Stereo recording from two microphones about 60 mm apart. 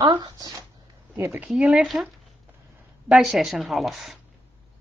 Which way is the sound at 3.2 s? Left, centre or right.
Centre.